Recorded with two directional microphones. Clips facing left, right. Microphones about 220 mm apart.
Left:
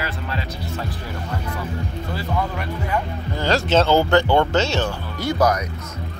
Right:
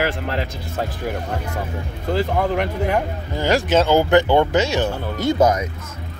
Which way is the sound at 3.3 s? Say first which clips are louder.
Right 1 dB; 15° right (ahead or behind).